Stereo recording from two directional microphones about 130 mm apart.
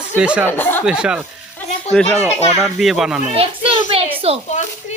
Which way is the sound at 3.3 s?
50° right (ahead or behind).